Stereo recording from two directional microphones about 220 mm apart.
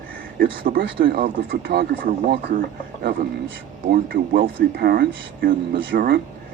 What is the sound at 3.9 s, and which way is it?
Speech, 40° right (ahead or behind).